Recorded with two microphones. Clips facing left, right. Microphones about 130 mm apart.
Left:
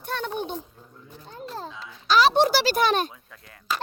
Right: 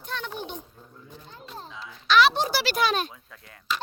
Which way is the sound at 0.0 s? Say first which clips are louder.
Left 5 dB; 45° left (ahead or behind).